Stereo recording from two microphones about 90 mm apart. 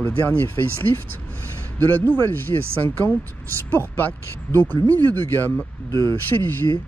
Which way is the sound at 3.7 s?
25° left (ahead or behind).